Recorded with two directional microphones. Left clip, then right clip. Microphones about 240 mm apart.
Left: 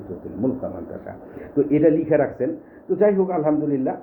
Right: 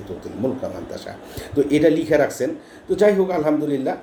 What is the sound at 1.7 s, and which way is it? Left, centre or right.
A man's voice, centre.